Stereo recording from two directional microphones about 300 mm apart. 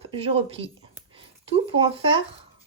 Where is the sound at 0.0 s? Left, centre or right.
Centre.